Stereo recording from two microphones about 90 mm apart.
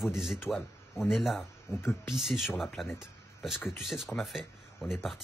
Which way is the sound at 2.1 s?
5° right (ahead or behind).